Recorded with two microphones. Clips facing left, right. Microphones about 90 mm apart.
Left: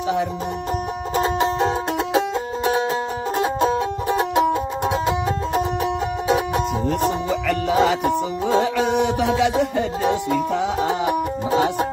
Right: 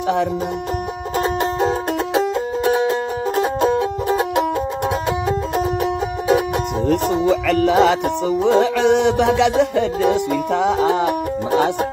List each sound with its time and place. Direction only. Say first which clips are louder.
1.1 s music: even; centre (ahead or behind)
2.7 s music: right 3 dB; centre (ahead or behind)
7.4 s music: right 2 dB; 75° right (ahead or behind)